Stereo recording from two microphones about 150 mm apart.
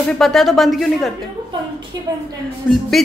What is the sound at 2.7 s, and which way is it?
Speech, centre (ahead or behind).